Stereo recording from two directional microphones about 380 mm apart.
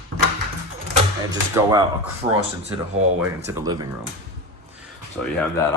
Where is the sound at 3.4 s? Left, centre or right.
Centre.